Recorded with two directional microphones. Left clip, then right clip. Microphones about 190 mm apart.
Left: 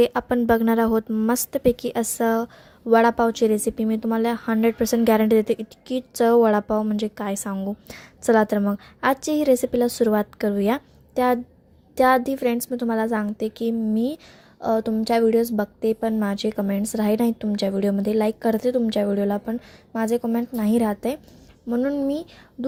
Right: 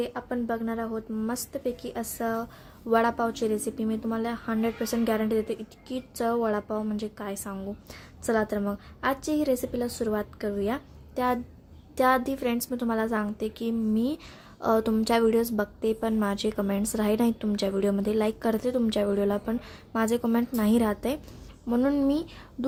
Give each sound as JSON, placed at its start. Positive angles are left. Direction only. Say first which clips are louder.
{"t": 0.0, "sound": "a woman's voice", "louder": "left 11 dB", "side_deg": 45}
{"t": 14.6, "sound": "a woman's voice", "louder": "left 2 dB", "side_deg": 15}
{"t": 21.7, "sound": "a woman's voice", "louder": "left 2 dB", "side_deg": 10}